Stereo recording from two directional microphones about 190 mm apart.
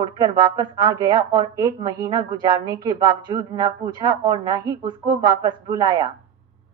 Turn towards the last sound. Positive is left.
turn(degrees=-20)  # may be behind; listen again after turning